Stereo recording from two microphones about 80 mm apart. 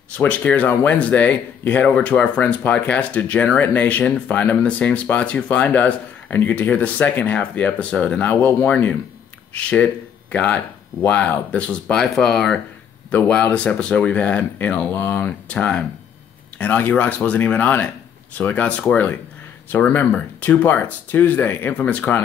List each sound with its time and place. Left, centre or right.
0.2 s speech: centre
19.9 s speech: left